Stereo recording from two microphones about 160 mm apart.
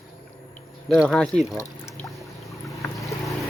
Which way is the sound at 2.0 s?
20° left (ahead or behind).